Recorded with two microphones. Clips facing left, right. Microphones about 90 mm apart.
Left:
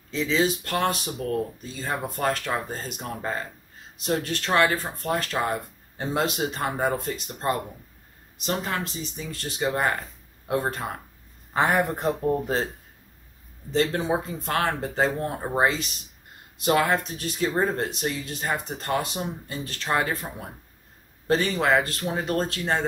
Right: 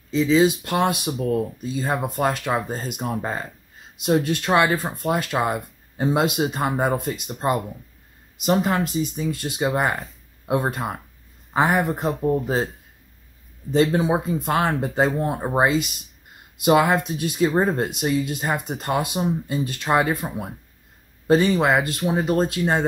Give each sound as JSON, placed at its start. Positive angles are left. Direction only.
{"t": 0.1, "sound": "speech", "side_deg": 0}
{"t": 0.4, "sound": "speech", "side_deg": -10}
{"t": 13.7, "sound": "speech", "side_deg": -10}
{"t": 21.5, "sound": "speech", "side_deg": -15}